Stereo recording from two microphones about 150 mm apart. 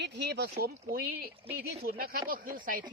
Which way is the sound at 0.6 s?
85° right.